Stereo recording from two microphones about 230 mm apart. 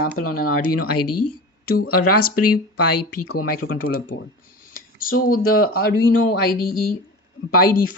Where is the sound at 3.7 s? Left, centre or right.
Left.